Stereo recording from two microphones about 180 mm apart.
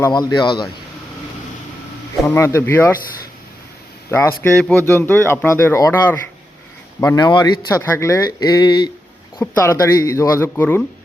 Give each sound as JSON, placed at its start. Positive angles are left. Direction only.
{"t": 0.0, "sound": "speech", "side_deg": 20}
{"t": 2.2, "sound": "speech", "side_deg": 15}
{"t": 4.1, "sound": "speech", "side_deg": 10}